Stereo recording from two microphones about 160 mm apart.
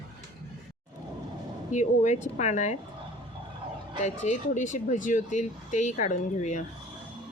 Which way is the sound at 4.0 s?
45° left (ahead or behind).